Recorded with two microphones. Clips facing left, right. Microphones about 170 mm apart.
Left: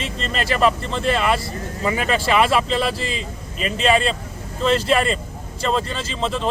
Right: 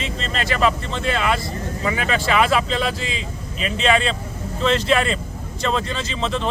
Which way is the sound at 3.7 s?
5° left (ahead or behind).